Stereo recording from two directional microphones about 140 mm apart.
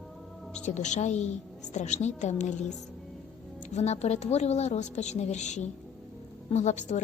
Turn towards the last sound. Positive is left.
turn(degrees=60)  # may be behind; listen again after turning